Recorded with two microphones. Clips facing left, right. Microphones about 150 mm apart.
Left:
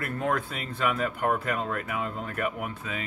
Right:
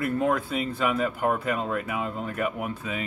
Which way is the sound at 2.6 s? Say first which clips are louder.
Right 3 dB; 20° right (ahead or behind).